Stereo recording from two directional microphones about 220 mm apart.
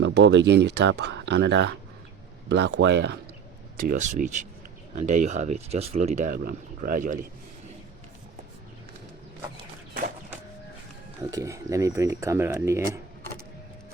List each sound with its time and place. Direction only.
0.0 s speech: 55° right (ahead or behind)
3.8 s speech: 35° right (ahead or behind)
11.2 s speech: 15° right (ahead or behind)